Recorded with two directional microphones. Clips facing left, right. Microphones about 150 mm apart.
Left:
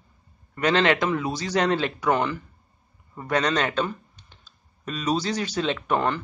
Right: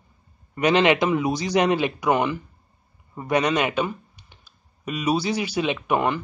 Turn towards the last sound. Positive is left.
turn(degrees=-10)  # may be behind; listen again after turning